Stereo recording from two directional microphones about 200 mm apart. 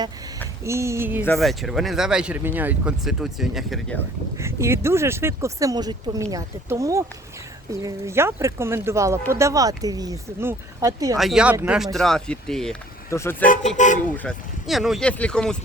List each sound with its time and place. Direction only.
0.6 s speech: 15° right (ahead or behind)
1.2 s speech: centre (ahead or behind)
4.4 s speech: 15° right (ahead or behind)
11.2 s speech: centre (ahead or behind)
11.9 s speech: centre (ahead or behind)
13.1 s speech: 15° left (ahead or behind)
13.4 s speech: 40° left (ahead or behind)
14.2 s speech: centre (ahead or behind)